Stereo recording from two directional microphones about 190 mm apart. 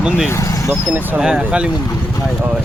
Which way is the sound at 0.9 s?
5° right (ahead or behind).